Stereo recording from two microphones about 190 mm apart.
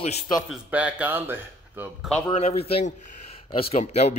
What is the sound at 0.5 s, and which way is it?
A man's voice, 5° right (ahead or behind).